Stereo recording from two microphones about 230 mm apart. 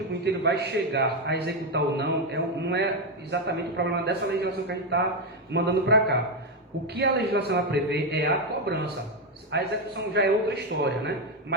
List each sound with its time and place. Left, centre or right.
0.4 s a man's voice: right